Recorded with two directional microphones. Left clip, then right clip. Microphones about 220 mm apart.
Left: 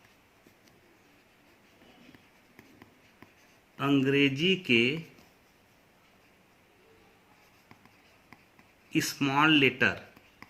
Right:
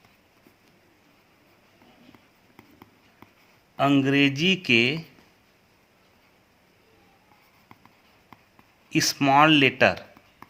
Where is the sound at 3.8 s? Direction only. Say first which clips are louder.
Right 5 dB; 50° right (ahead or behind).